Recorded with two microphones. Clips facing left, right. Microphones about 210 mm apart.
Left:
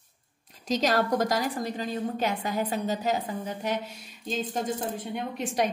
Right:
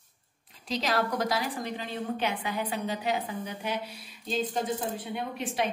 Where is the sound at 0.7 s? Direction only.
45° left (ahead or behind).